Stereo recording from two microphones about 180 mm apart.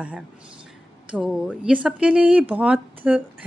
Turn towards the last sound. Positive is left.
turn(degrees=-10)  # may be behind; listen again after turning